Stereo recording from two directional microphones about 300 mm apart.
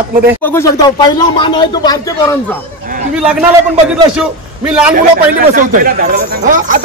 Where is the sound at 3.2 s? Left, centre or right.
Centre.